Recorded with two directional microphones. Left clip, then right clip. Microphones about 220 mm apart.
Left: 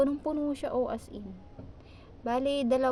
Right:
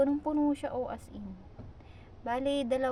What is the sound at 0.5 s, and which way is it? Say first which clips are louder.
Speech: left 4 dB; 30° left (ahead or behind).